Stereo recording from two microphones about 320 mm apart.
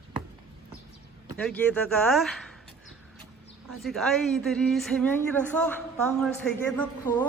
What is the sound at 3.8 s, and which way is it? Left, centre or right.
A woman's voice, centre.